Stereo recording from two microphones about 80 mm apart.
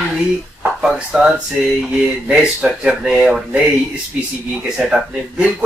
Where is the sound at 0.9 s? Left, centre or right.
Centre.